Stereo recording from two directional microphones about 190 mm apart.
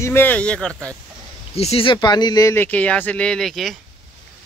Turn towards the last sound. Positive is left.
turn(degrees=0)  # may be behind; listen again after turning